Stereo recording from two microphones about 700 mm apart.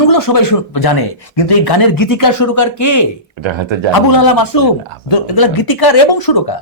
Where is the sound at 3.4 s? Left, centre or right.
Right.